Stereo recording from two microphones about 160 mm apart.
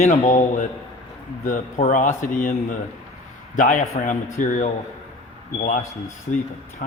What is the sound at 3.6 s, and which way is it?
A man's voice, 55° left (ahead or behind).